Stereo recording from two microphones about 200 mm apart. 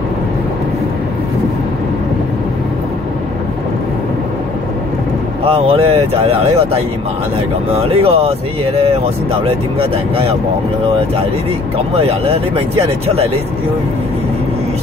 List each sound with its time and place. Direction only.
5.4 s speech: 30° right (ahead or behind)
7.8 s speech: 30° right (ahead or behind)
11.9 s speech: 30° right (ahead or behind)